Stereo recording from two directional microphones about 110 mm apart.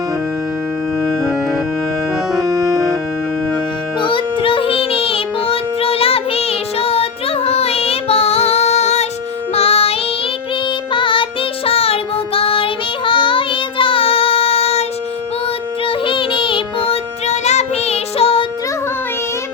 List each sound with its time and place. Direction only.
4.0 s music: 50° left (ahead or behind); by 9.0 s 85° left
9.6 s child singing: 65° left (ahead or behind)
10.9 s child singing: 50° left (ahead or behind); by 14.8 s 65° left (ahead or behind)
15.9 s music: 50° left (ahead or behind)